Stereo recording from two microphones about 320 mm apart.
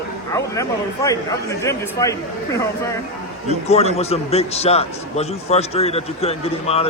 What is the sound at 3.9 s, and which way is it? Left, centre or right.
A man's voice, centre.